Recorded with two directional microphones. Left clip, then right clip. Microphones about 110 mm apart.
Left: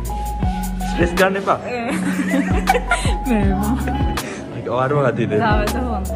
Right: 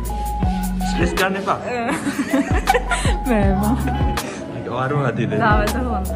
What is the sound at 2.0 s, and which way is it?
Music, 30° right (ahead or behind).